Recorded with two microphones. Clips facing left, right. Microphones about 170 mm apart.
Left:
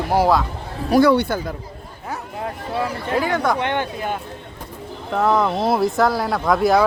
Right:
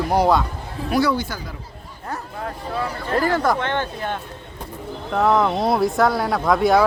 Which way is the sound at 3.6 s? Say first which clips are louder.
Left 1 dB; 15° left (ahead or behind).